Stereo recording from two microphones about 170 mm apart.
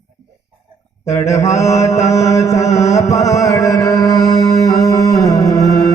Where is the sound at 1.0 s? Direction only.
15° left (ahead or behind).